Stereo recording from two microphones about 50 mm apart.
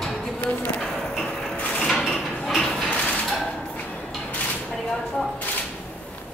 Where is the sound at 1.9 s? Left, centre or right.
Centre.